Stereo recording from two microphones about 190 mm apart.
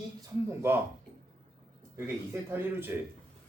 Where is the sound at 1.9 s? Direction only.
10° right (ahead or behind).